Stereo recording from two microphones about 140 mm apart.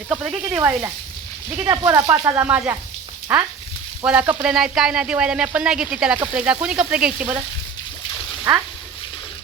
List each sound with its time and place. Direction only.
0.4 s sizzle: 15° right (ahead or behind)
1.5 s speech: 20° right (ahead or behind)
3.3 s sizzle: 10° right (ahead or behind)
4.5 s speech: 5° right (ahead or behind)
6.1 s sizzle: 10° right (ahead or behind)